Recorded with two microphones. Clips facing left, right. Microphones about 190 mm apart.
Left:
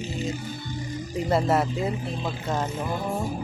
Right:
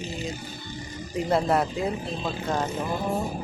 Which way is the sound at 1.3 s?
Centre (ahead or behind).